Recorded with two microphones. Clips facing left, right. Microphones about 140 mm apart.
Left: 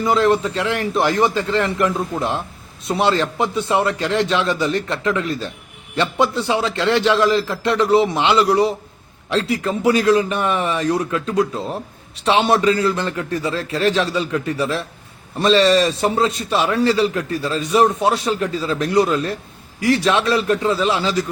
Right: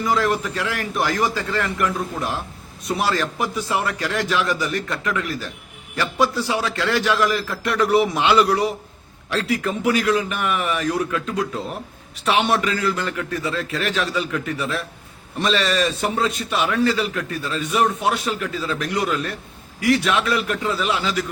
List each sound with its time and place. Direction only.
0.0 s a man's voice: 25° left (ahead or behind)